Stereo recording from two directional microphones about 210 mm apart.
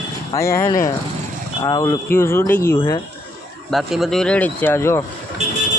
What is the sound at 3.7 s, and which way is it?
Speech, centre (ahead or behind).